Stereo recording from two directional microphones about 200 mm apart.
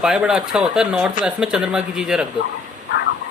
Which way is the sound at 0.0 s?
5° right (ahead or behind).